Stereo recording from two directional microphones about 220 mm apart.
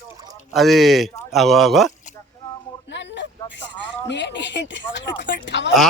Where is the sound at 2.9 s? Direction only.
55° left (ahead or behind).